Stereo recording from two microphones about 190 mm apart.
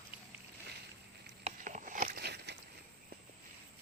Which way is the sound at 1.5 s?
40° right (ahead or behind).